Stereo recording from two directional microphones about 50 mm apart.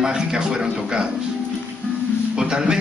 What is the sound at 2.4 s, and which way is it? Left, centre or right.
Speech, centre.